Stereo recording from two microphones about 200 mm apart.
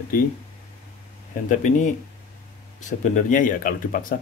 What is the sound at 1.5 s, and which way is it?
Speech, 35° left (ahead or behind).